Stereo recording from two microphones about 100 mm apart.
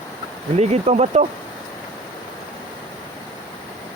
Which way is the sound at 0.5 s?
90° right.